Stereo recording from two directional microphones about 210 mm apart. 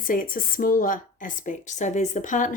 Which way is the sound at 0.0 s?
40° left (ahead or behind).